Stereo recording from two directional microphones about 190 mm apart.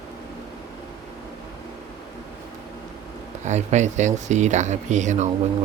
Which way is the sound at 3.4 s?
40° right (ahead or behind).